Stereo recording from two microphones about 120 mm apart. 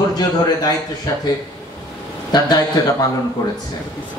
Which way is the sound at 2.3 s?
35° left (ahead or behind).